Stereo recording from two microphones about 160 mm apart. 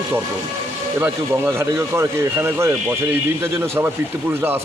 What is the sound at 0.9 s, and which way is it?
Speech, 15° right (ahead or behind).